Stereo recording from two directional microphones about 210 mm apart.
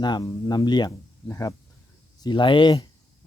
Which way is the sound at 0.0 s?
20° left (ahead or behind).